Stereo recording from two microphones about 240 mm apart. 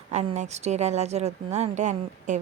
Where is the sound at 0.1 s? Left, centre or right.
Right.